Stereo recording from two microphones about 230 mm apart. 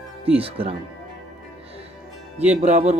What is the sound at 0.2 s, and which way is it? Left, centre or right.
Speech, right.